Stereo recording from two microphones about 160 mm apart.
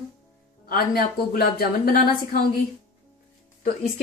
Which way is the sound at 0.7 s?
70° left (ahead or behind).